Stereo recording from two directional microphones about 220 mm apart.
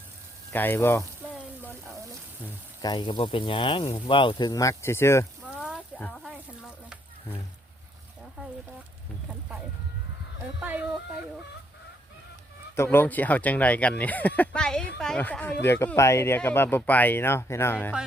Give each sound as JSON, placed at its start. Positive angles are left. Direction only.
{"t": 0.5, "sound": "speech", "side_deg": 10}
{"t": 2.8, "sound": "speech", "side_deg": 20}
{"t": 5.5, "sound": "a sound", "side_deg": 0}
{"t": 10.6, "sound": "speech", "side_deg": -5}
{"t": 12.7, "sound": "speech", "side_deg": 10}